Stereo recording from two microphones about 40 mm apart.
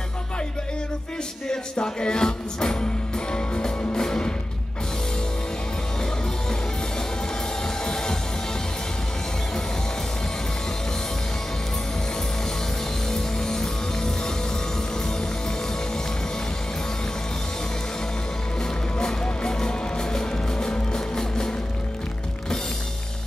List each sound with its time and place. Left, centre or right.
1.5 s music: left
7.6 s music: centre
13.1 s music: centre
18.9 s music: centre